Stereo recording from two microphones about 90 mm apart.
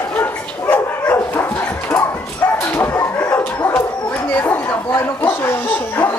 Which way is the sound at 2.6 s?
20° left (ahead or behind).